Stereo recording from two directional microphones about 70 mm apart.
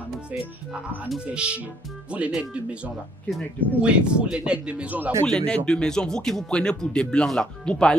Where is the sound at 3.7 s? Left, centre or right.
Centre.